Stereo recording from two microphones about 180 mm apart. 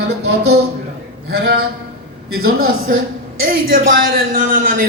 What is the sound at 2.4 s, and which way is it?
A woman's voice, 55° right (ahead or behind).